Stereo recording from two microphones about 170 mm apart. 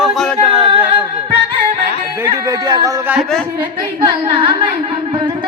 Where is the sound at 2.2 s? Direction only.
20° right (ahead or behind).